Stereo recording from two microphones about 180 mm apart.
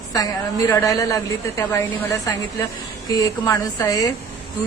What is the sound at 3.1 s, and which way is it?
Speech, 20° left (ahead or behind).